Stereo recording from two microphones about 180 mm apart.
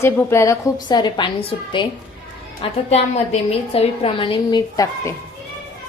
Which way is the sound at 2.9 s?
35° left (ahead or behind).